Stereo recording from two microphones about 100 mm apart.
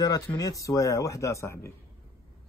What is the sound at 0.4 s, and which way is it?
Speech, 35° left (ahead or behind).